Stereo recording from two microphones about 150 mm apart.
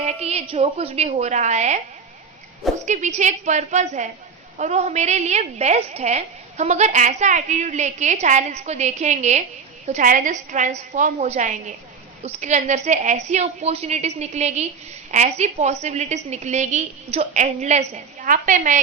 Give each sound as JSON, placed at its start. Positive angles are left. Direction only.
{"t": 0.0, "sound": "a sound", "side_deg": -45}
{"t": 0.5, "sound": "a woman's voice", "side_deg": -40}
{"t": 2.8, "sound": "a woman's voice", "side_deg": -50}